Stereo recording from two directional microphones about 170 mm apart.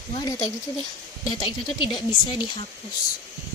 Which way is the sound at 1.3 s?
25° left (ahead or behind).